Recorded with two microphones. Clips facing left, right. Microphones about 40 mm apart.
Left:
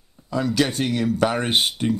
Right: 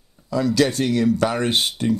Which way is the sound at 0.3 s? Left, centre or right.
Left.